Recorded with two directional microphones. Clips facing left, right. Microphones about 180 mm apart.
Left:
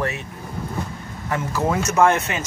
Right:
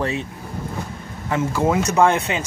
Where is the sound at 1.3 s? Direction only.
15° right (ahead or behind).